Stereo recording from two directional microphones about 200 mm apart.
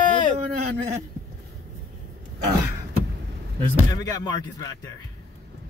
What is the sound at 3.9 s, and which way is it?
Speech, 20° left (ahead or behind).